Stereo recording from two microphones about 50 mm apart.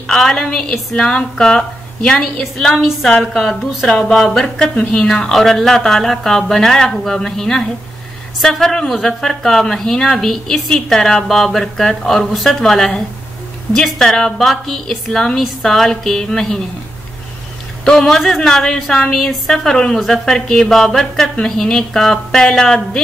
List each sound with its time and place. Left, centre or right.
0.0 s a woman's voice: centre
17.8 s a woman's voice: centre